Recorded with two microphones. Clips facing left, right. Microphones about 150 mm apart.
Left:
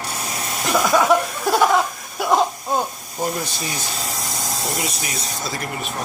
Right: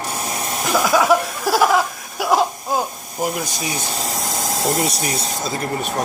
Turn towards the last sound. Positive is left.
turn(degrees=-35)  # may be behind; listen again after turning